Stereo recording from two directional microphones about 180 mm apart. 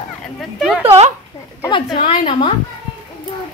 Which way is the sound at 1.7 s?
30° left (ahead or behind).